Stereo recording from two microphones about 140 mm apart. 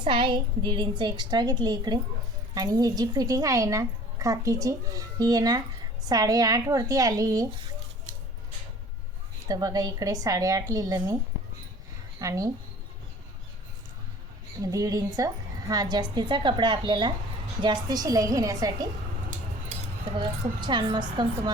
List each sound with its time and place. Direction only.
0.0 s a woman's voice: 35° right (ahead or behind)
9.5 s a woman's voice: 30° right (ahead or behind)
12.2 s a woman's voice: 25° right (ahead or behind)
14.6 s a woman's voice: 25° right (ahead or behind)
20.1 s a woman's voice: 35° right (ahead or behind)